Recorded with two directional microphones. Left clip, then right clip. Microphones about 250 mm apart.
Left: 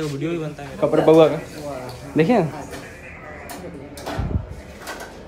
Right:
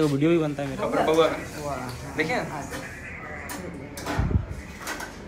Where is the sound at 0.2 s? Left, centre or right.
Centre.